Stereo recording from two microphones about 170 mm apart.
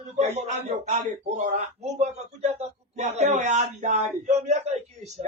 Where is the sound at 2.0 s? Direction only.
40° right (ahead or behind).